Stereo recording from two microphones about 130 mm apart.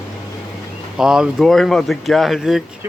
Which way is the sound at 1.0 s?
5° right (ahead or behind).